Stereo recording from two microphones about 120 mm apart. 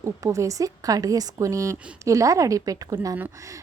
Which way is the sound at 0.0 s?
25° right (ahead or behind).